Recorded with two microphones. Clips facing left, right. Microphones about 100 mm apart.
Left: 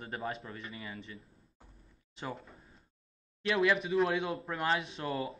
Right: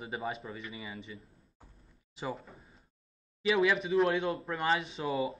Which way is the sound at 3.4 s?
Centre (ahead or behind).